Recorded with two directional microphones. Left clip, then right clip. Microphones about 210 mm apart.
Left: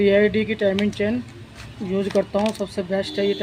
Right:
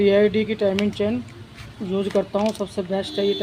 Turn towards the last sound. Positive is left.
turn(degrees=0)  # may be behind; listen again after turning